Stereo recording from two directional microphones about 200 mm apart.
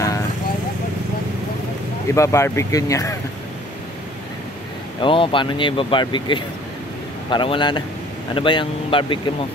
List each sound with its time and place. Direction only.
2.1 s speech: 15° left (ahead or behind)
5.0 s speech: 25° left (ahead or behind)